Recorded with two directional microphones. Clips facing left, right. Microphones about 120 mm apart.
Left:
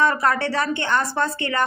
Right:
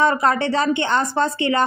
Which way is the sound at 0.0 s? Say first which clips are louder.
Right 2 dB; 20° right (ahead or behind).